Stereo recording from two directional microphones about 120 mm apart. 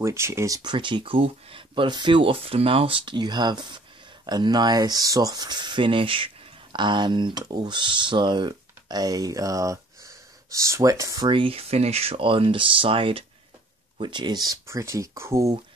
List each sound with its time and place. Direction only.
0.0 s speech: 25° right (ahead or behind)
0.6 s speech: 40° right (ahead or behind)
11.2 s speech: 45° right (ahead or behind); by 15.5 s 25° right (ahead or behind)